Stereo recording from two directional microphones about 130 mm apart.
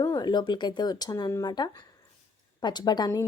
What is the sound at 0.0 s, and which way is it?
A woman's voice, 30° left (ahead or behind).